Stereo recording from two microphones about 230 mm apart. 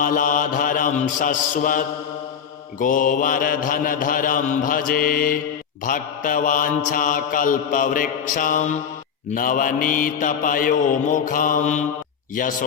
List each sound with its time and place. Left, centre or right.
0.0 s mantra: left